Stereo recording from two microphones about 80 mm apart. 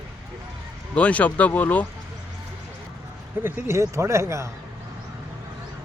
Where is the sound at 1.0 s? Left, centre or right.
Centre.